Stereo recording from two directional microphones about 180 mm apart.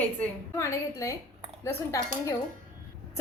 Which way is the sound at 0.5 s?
15° left (ahead or behind).